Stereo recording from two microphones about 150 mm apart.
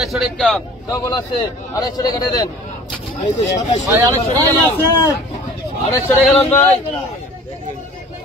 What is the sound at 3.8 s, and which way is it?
Speech, 25° right (ahead or behind).